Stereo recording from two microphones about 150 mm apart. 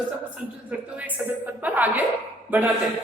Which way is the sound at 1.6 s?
10° right (ahead or behind).